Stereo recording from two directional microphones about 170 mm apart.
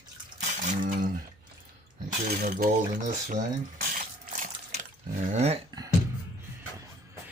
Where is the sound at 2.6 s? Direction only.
45° right (ahead or behind).